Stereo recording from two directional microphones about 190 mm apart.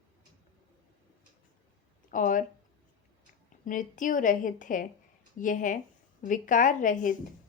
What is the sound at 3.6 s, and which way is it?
A woman's voice, 45° left (ahead or behind).